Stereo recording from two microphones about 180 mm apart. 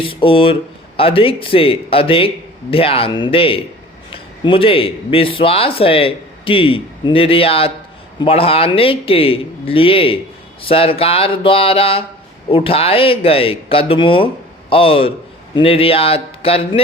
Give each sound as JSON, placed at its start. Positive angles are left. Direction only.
{"t": 0.0, "sound": "a man's voice", "side_deg": 30}